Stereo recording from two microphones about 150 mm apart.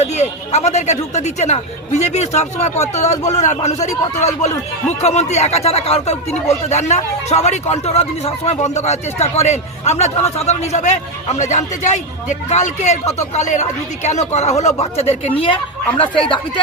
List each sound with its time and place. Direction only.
0.0 s a man's voice: 45° left (ahead or behind)